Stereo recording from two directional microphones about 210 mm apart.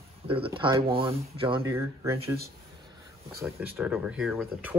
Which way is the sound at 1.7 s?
10° right (ahead or behind).